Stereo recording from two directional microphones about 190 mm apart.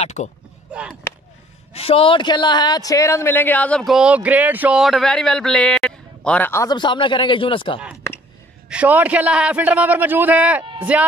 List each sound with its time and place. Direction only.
0.0 s speech: 35° left (ahead or behind)
1.7 s a man's voice: 30° left (ahead or behind)
8.6 s a man's voice: 5° right (ahead or behind)
10.6 s a sound: 25° right (ahead or behind)